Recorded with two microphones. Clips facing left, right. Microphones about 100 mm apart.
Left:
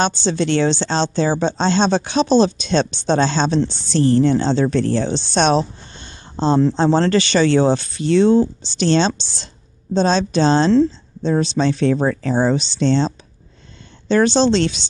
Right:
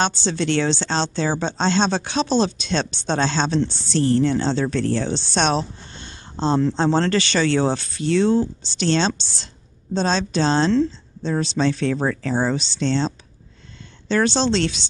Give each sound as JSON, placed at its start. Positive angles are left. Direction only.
{"t": 0.0, "sound": "speech", "side_deg": 15}
{"t": 10.7, "sound": "a woman's voice", "side_deg": 30}
{"t": 11.5, "sound": "speech", "side_deg": 15}